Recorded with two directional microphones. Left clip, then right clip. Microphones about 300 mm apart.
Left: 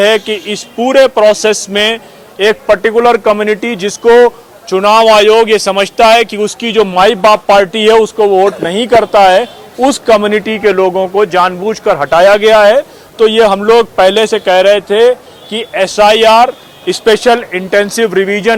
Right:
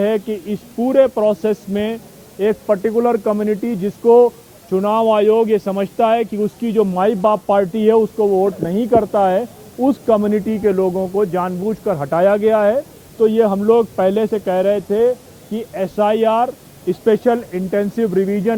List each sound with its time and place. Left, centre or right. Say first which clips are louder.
0.0 s speech: left 9 dB; centre
7.9 s speech: left 9 dB; left
8.4 s speech: left 7 dB; centre
10.8 s speech: left 8 dB; left
11.2 s speech: left 11 dB; centre